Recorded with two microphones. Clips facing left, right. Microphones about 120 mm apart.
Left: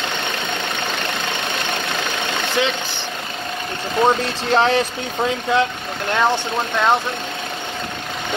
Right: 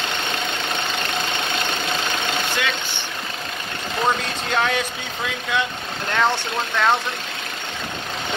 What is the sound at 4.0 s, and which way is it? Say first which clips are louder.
Speech: left 5 dB; 30° left (ahead or behind).